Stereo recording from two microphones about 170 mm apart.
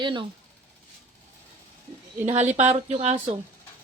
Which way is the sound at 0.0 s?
30° right (ahead or behind).